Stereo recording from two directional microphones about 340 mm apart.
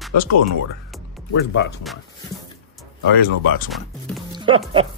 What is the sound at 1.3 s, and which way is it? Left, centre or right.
Speech, left.